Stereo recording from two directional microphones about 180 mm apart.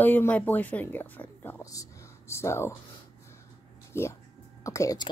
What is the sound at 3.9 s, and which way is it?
A woman's voice, 15° left (ahead or behind).